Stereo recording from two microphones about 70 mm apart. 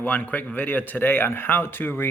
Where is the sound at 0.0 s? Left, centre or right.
Left.